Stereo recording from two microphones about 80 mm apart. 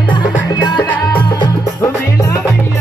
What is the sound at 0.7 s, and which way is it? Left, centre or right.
Music, centre.